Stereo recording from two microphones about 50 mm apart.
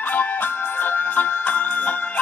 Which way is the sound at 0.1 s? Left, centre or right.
Left.